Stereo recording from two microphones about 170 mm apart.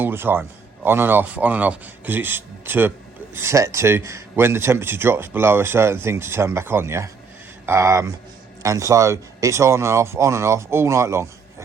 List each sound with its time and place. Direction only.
0.0 s a man's voice: 10° right (ahead or behind)